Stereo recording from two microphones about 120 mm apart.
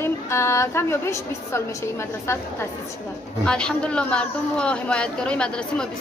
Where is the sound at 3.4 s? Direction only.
5° left (ahead or behind).